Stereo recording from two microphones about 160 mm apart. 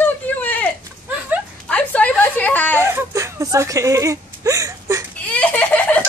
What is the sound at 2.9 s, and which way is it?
Whimper, 15° right (ahead or behind).